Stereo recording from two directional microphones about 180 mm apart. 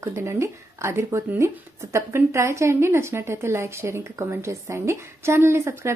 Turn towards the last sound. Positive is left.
turn(degrees=-15)  # may be behind; listen again after turning